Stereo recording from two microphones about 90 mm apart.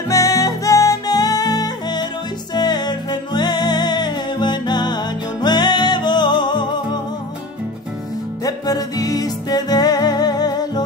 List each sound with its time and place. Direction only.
0.1 s music: 40° left (ahead or behind); by 7.0 s 55° left (ahead or behind)
8.5 s music: 45° left (ahead or behind)